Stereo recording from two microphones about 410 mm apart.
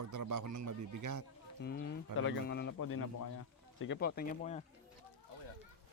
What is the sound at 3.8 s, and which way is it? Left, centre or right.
Speech, left.